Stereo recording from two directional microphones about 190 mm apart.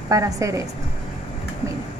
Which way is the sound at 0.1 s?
15° right (ahead or behind).